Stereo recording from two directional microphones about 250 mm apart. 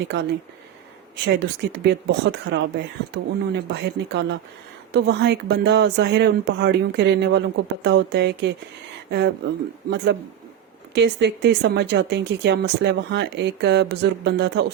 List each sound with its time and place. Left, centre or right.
0.0 s speech: right